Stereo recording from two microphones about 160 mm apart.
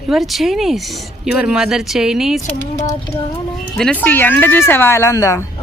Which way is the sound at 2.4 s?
20° left (ahead or behind).